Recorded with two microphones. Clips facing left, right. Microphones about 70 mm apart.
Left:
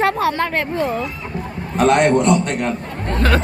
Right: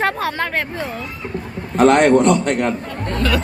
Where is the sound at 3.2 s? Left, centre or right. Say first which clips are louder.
Left 2 dB; left.